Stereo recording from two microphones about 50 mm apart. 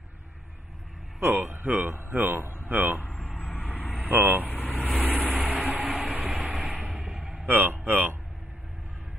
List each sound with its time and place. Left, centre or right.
1.2 s speech: right
1.6 s speech: right
3.3 s vehicle: left
4.1 s speech: right
4.5 s vehicle: left
5.0 s vehicle: right
5.9 s train: right
6.7 s a sound: right
7.0 s a sound: centre
7.4 s speech: right